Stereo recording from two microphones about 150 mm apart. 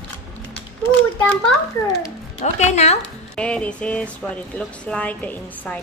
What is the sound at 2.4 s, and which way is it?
Speech, 50° left (ahead or behind).